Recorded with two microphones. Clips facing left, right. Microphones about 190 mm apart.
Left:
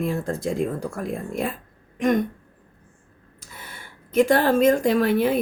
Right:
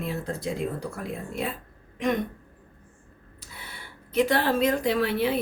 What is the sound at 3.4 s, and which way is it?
Speech, 45° left (ahead or behind).